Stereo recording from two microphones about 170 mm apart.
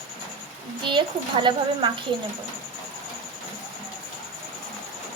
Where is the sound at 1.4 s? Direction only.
30° right (ahead or behind).